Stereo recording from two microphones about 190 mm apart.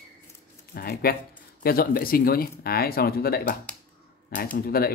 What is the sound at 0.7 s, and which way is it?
Speech, 55° left (ahead or behind).